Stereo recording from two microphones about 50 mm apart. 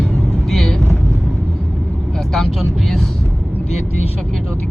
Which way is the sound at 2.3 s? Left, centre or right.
Centre.